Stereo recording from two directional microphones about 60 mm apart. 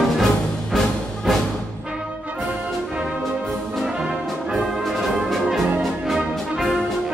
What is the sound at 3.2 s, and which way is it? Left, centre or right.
Brass instrument, centre.